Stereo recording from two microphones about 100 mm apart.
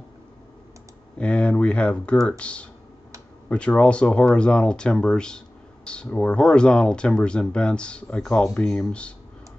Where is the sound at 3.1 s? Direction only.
30° right (ahead or behind).